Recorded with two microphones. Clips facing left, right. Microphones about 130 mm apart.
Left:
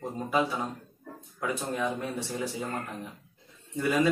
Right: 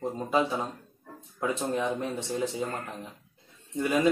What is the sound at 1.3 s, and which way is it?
Speech, 25° right (ahead or behind).